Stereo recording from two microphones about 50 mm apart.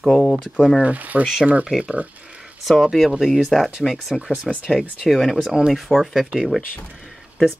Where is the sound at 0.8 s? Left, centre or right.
Right.